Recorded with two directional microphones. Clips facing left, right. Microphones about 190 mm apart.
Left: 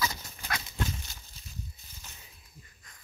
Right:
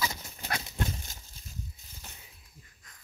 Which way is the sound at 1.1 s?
45° right (ahead or behind).